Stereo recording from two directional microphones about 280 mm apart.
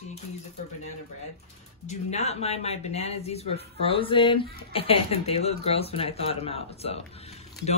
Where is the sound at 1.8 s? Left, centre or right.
Left.